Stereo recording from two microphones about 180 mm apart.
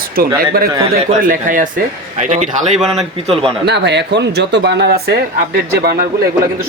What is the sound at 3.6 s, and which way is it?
Speech, 70° right (ahead or behind).